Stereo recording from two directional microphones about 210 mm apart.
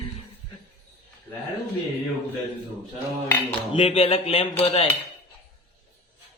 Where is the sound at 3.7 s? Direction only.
25° left (ahead or behind).